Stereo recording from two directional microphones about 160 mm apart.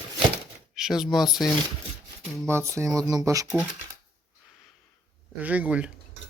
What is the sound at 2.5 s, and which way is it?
Speech, 15° right (ahead or behind).